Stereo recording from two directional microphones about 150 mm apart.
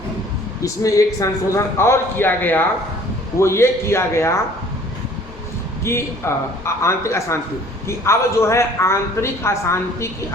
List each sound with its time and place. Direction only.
0.6 s a man's voice: 20° left (ahead or behind)
5.8 s a man's voice: 20° left (ahead or behind)